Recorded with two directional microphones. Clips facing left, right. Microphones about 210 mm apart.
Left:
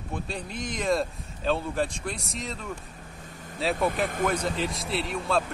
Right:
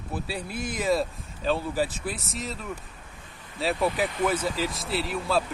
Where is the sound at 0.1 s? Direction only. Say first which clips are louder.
Right 2 dB; 5° right (ahead or behind).